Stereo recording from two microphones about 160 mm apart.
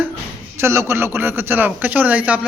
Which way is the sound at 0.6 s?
15° right (ahead or behind).